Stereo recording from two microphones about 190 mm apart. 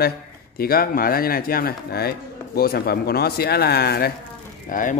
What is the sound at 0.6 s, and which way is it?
Speech, 50° left (ahead or behind).